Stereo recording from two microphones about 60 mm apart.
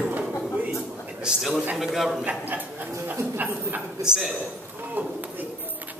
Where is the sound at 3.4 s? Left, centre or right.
Right.